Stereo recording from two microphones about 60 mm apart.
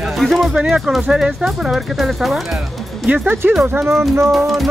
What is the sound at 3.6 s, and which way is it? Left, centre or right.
Speech, right.